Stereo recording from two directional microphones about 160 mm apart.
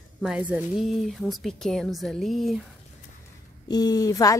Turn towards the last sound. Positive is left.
turn(degrees=20)  # may be behind; listen again after turning